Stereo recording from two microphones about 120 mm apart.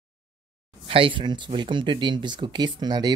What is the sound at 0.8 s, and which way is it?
Speech, 50° right (ahead or behind).